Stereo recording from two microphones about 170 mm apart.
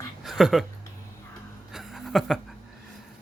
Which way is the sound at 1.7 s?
Centre (ahead or behind).